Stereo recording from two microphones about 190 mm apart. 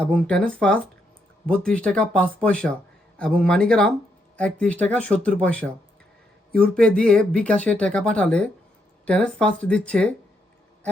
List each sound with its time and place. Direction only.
0.0 s speech: 5° left (ahead or behind)